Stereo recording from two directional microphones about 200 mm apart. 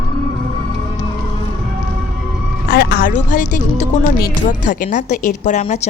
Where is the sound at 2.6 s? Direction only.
50° left (ahead or behind).